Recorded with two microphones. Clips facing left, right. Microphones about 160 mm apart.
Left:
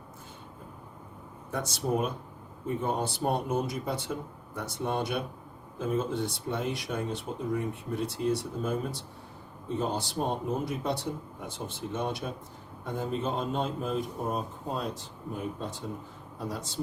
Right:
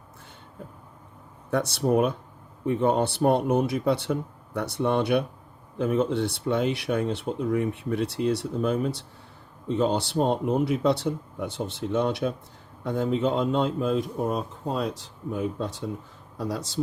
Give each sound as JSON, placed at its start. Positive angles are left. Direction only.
{"t": 1.5, "sound": "speech", "side_deg": -65}